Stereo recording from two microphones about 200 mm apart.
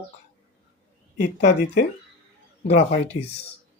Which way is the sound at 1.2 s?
35° left (ahead or behind).